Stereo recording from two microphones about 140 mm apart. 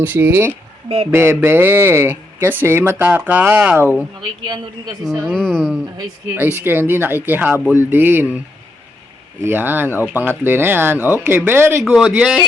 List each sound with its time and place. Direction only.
0.0 s speech: 15° right (ahead or behind)
4.4 s a woman's voice: 30° right (ahead or behind)
5.2 s speech: 5° left (ahead or behind)
6.3 s speech: 15° right (ahead or behind)
9.4 s speech: 15° right (ahead or behind)
11.8 s speech: centre (ahead or behind)